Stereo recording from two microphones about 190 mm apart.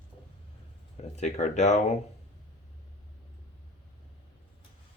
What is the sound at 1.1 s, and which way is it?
Speech, 40° left (ahead or behind).